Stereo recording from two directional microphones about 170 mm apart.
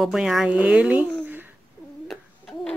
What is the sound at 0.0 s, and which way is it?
Speech, centre (ahead or behind).